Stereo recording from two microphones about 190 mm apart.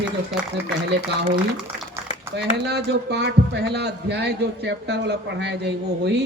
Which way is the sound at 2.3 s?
60° right (ahead or behind).